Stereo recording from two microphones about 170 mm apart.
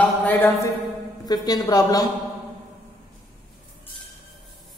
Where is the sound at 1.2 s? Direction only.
25° left (ahead or behind).